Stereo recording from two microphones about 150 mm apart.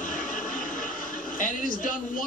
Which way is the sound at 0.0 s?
60° left (ahead or behind).